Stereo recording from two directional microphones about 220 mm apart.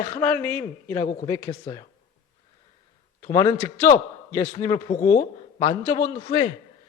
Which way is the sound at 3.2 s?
15° left (ahead or behind).